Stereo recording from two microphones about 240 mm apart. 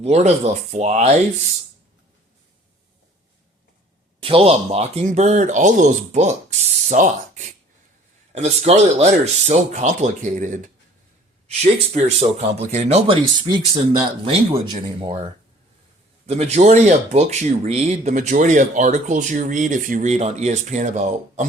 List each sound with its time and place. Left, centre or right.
0.0 s speech: right
4.2 s speech: right
11.6 s speech: right
15.0 s speech: right